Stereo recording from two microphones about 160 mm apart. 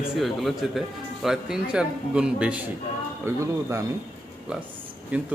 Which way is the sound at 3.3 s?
20° right (ahead or behind).